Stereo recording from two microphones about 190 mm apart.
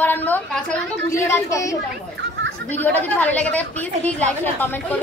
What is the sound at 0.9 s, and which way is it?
Speech, 15° left (ahead or behind).